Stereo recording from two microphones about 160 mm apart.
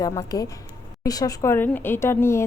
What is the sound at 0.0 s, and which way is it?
A woman's voice, 20° left (ahead or behind).